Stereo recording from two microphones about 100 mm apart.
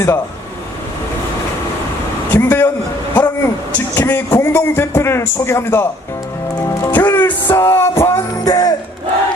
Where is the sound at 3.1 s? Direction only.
15° left (ahead or behind).